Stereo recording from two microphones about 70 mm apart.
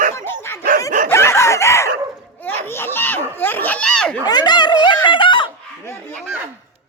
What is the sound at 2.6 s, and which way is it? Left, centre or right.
Speech, left.